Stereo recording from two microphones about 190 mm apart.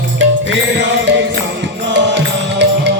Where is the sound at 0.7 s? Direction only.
65° right (ahead or behind).